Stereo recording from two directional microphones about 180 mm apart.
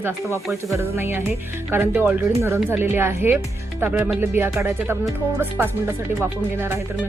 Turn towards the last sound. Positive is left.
turn(degrees=-10)  # may be behind; listen again after turning